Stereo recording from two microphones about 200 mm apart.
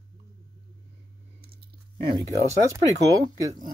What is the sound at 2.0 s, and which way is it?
Speech, 25° right (ahead or behind).